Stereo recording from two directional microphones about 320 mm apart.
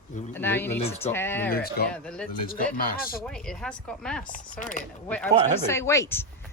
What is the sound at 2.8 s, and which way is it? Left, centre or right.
Speech, left.